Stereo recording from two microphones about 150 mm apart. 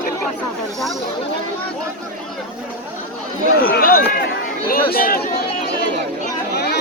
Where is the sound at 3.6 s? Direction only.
75° left (ahead or behind).